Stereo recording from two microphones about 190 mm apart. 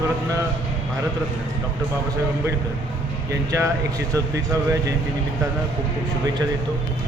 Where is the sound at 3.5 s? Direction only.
15° right (ahead or behind).